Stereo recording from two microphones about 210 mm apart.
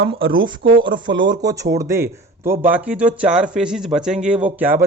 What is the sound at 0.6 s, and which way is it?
Speech, 65° right (ahead or behind).